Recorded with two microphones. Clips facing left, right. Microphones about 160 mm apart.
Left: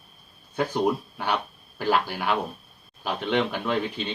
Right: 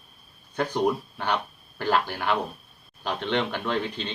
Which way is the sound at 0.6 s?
10° left (ahead or behind).